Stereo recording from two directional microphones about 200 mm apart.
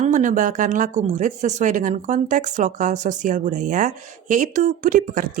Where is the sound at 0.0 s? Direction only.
40° right (ahead or behind).